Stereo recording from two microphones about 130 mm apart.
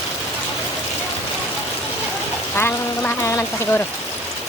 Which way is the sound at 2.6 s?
15° left (ahead or behind).